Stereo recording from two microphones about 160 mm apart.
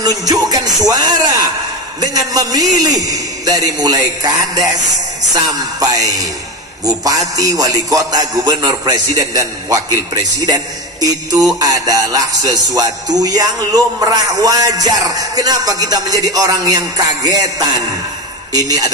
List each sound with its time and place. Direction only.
0.3 s music: 25° right (ahead or behind)